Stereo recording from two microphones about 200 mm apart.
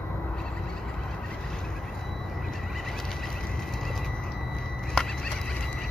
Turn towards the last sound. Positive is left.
turn(degrees=5)  # may be behind; listen again after turning